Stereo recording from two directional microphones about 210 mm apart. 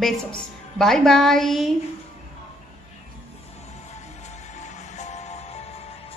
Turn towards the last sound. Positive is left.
turn(degrees=30)  # may be behind; listen again after turning